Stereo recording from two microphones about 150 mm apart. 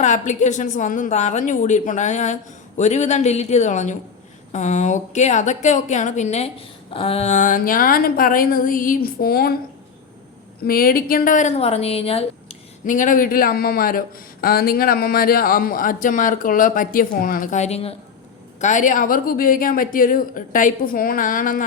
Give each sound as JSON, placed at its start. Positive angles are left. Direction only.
{"t": 0.0, "sound": "a woman's voice", "side_deg": 55}
{"t": 10.7, "sound": "a woman's voice", "side_deg": 80}
{"t": 12.8, "sound": "speech", "side_deg": 60}
{"t": 18.6, "sound": "a woman's voice", "side_deg": 55}